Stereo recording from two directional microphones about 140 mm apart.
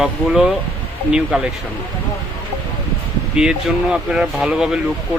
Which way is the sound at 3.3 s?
5° right (ahead or behind).